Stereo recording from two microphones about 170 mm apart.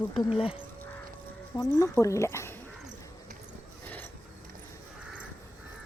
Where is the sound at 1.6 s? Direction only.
15° left (ahead or behind).